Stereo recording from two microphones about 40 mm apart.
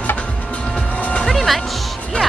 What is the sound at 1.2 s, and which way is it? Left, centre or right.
Music, centre.